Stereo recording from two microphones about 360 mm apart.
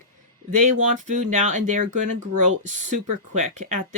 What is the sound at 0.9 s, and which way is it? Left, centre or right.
Speech, right.